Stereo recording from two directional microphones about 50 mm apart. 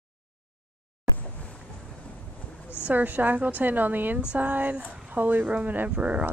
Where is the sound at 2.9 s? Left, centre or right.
Right.